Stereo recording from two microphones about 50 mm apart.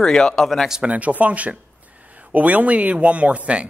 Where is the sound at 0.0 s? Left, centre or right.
Centre.